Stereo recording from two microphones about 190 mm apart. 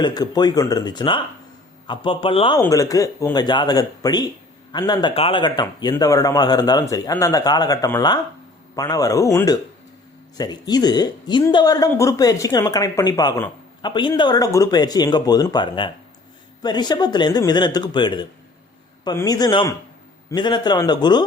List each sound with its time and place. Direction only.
0.0 s a woman's voice: 20° left (ahead or behind)